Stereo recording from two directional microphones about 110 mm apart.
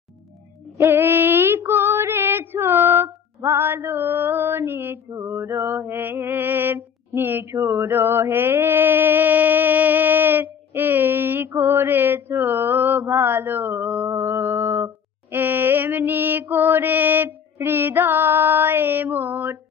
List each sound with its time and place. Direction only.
0.7 s female singing: 20° right (ahead or behind)
5.1 s mantra: 30° right (ahead or behind)